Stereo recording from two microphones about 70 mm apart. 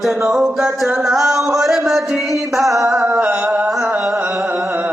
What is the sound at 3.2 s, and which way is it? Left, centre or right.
Mantra, centre.